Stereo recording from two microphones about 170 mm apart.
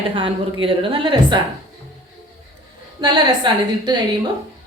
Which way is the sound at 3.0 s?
25° right (ahead or behind).